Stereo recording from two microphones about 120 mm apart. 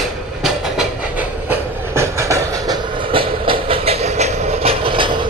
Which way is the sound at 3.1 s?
50° right (ahead or behind).